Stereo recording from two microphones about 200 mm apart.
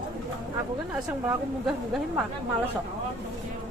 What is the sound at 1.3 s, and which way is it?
Speech, 5° right (ahead or behind).